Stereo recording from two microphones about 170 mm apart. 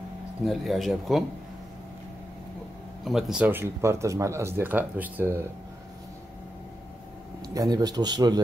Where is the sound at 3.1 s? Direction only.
Centre (ahead or behind).